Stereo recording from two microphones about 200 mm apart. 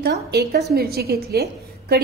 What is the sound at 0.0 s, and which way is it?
A woman's voice, 55° right (ahead or behind).